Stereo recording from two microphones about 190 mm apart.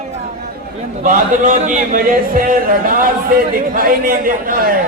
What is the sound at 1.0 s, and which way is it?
A man's voice, 40° right (ahead or behind).